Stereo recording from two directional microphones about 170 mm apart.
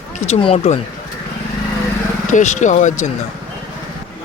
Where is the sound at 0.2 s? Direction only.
35° left (ahead or behind).